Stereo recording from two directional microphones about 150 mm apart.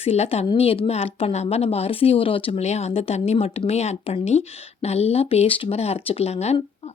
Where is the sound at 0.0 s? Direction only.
40° left (ahead or behind).